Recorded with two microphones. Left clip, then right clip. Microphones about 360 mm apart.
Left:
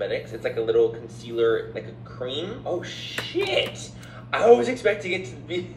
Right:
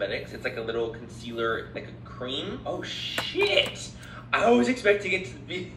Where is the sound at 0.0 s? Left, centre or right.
Left.